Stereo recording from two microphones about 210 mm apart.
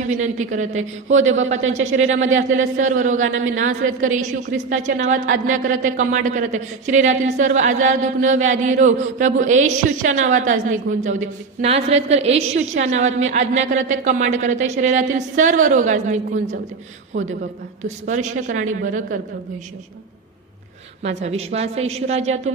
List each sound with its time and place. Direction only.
0.0 s a woman's voice: 35° right (ahead or behind)
3.2 s a man's voice: 70° right (ahead or behind)
3.6 s a woman's voice: 35° right (ahead or behind)
17.8 s a woman's voice: 35° right (ahead or behind)
21.0 s a woman's voice: 30° right (ahead or behind)